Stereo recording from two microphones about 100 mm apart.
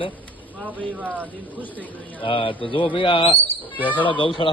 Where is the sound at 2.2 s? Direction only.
60° left (ahead or behind).